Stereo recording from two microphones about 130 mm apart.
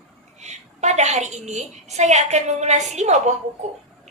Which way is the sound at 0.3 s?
60° right (ahead or behind).